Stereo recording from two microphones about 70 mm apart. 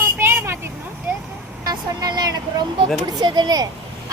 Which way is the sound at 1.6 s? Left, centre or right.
Right.